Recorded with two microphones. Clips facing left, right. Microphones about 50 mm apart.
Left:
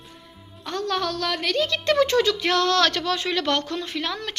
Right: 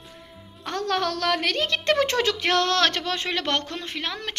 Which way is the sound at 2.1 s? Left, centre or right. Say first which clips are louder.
Left 2 dB; right.